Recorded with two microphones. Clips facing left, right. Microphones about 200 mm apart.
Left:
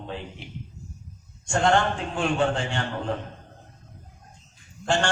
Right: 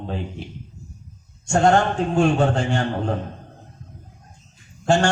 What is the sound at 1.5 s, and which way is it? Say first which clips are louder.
A man's voice: right 5 dB; 40° right (ahead or behind).